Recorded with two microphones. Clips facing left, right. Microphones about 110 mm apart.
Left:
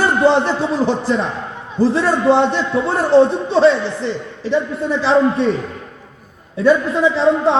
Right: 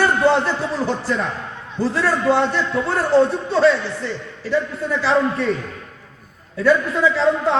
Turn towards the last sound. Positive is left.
turn(degrees=20)  # may be behind; listen again after turning